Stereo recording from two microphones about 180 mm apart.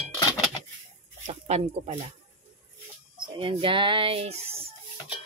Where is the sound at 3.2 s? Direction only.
30° right (ahead or behind).